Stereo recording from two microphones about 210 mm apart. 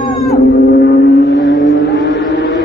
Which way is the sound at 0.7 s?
50° left (ahead or behind).